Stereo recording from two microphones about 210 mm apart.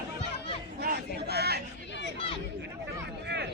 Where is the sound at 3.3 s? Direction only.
50° right (ahead or behind).